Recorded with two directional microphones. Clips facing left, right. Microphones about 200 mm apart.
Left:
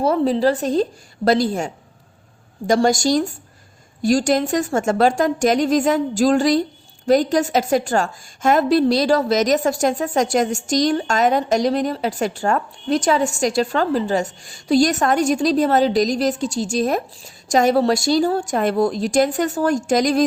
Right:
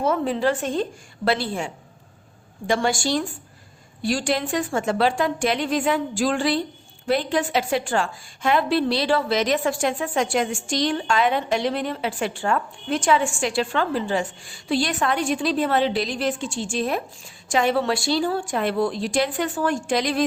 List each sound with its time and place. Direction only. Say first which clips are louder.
0.0 s a woman's voice: left 5 dB; 35° left (ahead or behind)